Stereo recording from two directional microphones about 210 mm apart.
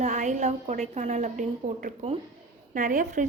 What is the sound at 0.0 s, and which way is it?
A woman's voice, 35° right (ahead or behind).